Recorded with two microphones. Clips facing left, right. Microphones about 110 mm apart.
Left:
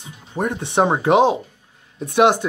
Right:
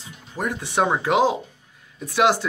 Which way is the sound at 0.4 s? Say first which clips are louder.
Left 4 dB; 25° left (ahead or behind).